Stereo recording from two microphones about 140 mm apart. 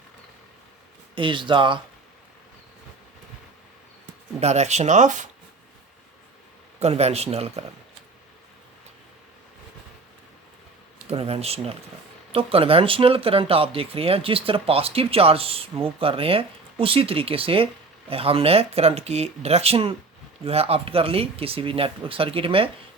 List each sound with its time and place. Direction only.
1.1 s speech: 35° right (ahead or behind)
4.4 s speech: 50° right (ahead or behind)
6.7 s speech: 50° right (ahead or behind)
11.1 s speech: 45° right (ahead or behind)